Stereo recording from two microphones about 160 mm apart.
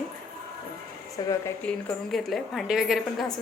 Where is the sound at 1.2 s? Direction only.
25° left (ahead or behind).